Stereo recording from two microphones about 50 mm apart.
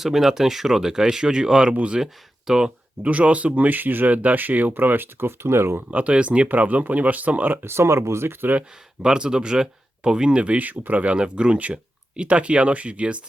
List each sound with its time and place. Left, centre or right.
0.0 s speech: centre; by 2.0 s right
2.5 s speech: centre
3.1 s speech: right
5.9 s speech: right
7.6 s speech: right
9.0 s speech: centre